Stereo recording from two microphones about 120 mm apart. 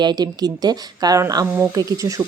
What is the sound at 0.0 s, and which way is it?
Speech, 35° right (ahead or behind).